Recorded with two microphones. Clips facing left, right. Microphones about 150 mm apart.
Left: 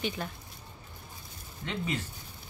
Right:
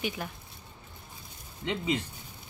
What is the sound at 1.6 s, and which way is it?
Speech, 15° right (ahead or behind).